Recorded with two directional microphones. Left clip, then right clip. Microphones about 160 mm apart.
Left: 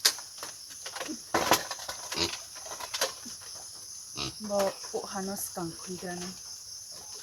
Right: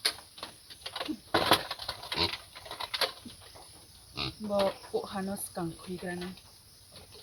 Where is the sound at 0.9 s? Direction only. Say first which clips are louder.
Even; 35° right (ahead or behind).